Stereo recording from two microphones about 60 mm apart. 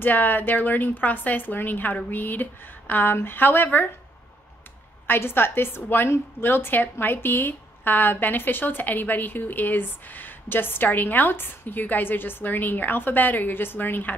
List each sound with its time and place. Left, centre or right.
0.0 s a woman's voice: left
5.0 s a woman's voice: left